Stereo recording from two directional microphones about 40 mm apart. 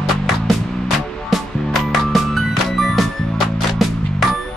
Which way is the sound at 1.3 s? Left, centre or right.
Centre.